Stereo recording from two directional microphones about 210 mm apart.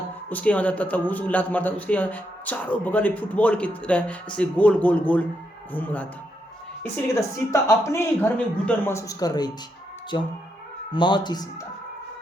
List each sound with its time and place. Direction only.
0.3 s speech: 5° left (ahead or behind)